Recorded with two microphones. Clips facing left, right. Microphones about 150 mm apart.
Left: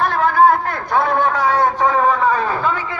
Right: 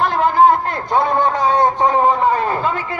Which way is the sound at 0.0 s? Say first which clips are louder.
Right 1 dB; 20° right (ahead or behind).